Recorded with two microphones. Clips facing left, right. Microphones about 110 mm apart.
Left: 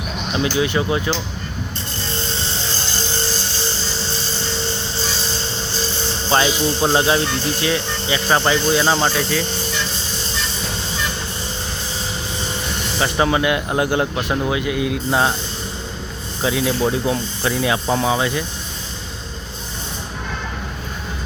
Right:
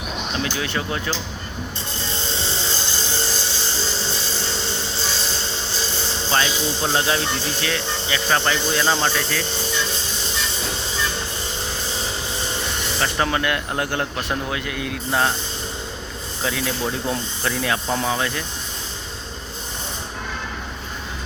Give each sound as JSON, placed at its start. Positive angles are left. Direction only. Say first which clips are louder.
{"t": 0.3, "sound": "speech", "louder": "left 8 dB", "side_deg": 15}
{"t": 6.3, "sound": "a man's voice", "louder": "left 5 dB", "side_deg": 25}
{"t": 13.0, "sound": "speech", "louder": "left 5 dB", "side_deg": 10}
{"t": 16.4, "sound": "speech", "louder": "left 6 dB", "side_deg": 15}